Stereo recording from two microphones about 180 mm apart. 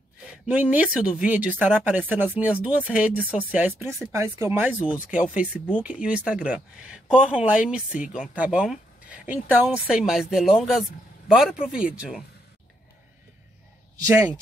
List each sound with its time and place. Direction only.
0.3 s speech: 10° right (ahead or behind)
5.8 s speech: 10° right (ahead or behind)
8.0 s speech: 45° left (ahead or behind)
8.4 s speech: 5° right (ahead or behind)
14.0 s speech: 15° right (ahead or behind)